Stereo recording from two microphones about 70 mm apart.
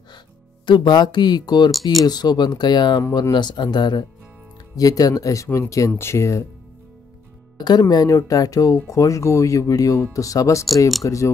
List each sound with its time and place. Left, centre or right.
0.7 s speech: left
2.0 s speech: left
3.1 s speech: left
4.7 s speech: left
7.5 s speech: left
7.9 s speech: left